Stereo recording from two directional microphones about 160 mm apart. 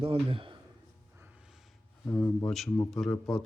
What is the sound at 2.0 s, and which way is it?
Speech, 15° left (ahead or behind).